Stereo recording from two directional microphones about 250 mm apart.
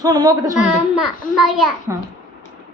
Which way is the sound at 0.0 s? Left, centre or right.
Centre.